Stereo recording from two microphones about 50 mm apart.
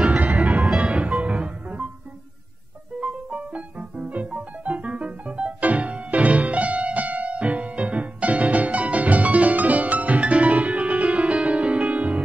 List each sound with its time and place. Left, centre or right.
0.0 s music: right
3.0 s music: right
4.6 s music: right